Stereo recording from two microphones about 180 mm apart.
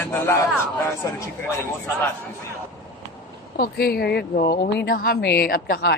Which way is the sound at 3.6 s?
55° left (ahead or behind).